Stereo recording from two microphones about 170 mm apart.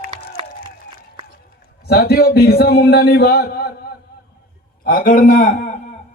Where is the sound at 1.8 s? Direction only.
65° left (ahead or behind).